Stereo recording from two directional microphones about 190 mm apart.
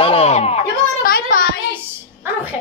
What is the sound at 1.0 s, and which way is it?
Child singing, 50° left (ahead or behind).